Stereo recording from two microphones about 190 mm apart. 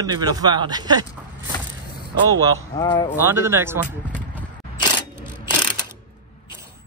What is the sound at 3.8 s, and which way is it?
Speech, 10° left (ahead or behind).